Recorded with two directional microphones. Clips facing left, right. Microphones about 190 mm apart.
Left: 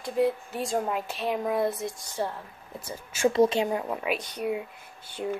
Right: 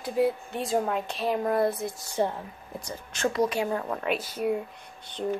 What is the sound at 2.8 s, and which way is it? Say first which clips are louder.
Speech: left 3 dB; 5° left (ahead or behind).